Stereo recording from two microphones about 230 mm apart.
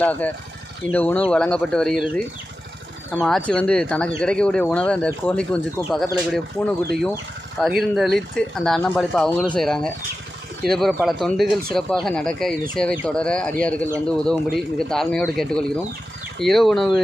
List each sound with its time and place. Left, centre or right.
0.0 s speech: centre